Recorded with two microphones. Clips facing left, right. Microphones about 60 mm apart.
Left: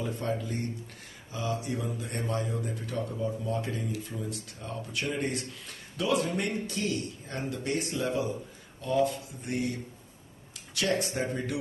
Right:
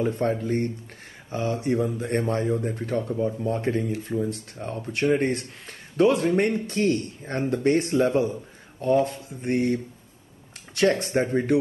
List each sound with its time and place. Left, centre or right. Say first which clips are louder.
0.0 s speech: right 8 dB; right